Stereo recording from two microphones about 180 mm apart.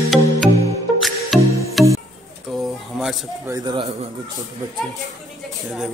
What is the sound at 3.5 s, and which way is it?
Speech, 25° right (ahead or behind).